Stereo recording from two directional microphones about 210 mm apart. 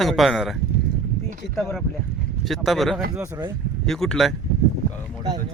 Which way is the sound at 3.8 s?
Centre (ahead or behind).